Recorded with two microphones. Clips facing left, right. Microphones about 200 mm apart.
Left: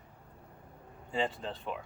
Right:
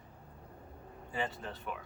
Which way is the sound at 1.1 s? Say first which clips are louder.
Left 5 dB; 25° left (ahead or behind).